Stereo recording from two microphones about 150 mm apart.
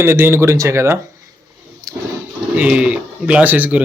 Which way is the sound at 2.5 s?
5° right (ahead or behind).